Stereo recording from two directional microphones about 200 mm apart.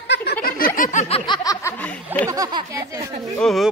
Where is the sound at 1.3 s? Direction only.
15° left (ahead or behind).